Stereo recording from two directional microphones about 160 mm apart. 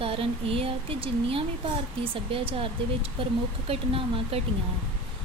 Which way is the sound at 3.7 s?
35° right (ahead or behind).